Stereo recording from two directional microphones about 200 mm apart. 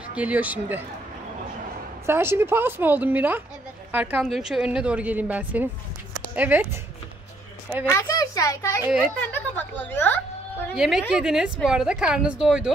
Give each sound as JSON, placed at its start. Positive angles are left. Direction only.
{"t": 0.1, "sound": "a woman's voice", "side_deg": -5}
{"t": 2.0, "sound": "a woman's voice", "side_deg": -10}
{"t": 7.9, "sound": "a child's voice", "side_deg": 15}
{"t": 8.8, "sound": "a woman's voice", "side_deg": -5}
{"t": 9.3, "sound": "a sound", "side_deg": 10}
{"t": 10.8, "sound": "a woman's voice", "side_deg": -5}